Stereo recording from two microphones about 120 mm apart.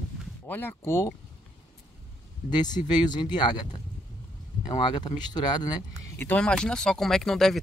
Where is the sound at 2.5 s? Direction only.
35° left (ahead or behind).